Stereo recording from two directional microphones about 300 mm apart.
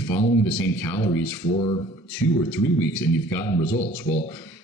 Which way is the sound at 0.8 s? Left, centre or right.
Centre.